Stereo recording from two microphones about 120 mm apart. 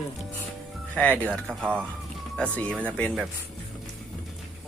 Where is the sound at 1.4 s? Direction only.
15° right (ahead or behind).